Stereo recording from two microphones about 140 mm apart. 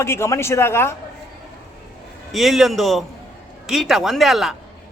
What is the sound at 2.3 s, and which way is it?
A man's voice, centre (ahead or behind).